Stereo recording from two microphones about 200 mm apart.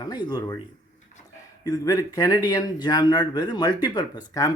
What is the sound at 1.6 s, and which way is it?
Speech, 20° left (ahead or behind).